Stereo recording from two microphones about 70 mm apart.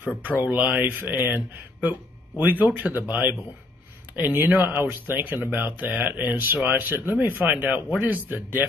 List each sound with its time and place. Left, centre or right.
0.4 s speech: right